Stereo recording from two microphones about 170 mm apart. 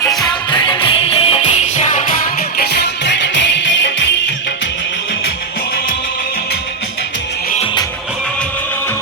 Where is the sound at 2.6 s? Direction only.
75° left (ahead or behind); by 4.0 s 90° left.